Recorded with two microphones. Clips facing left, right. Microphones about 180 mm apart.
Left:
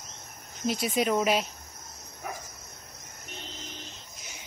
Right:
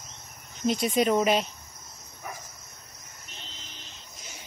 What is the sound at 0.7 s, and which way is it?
Speech, 5° left (ahead or behind).